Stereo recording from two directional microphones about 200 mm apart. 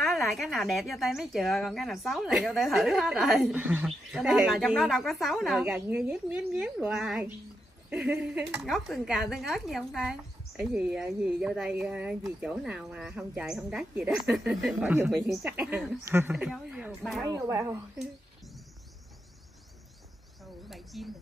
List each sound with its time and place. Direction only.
0.0 s speech: centre (ahead or behind)
17.2 s speech: 15° right (ahead or behind)
20.6 s bird: centre (ahead or behind)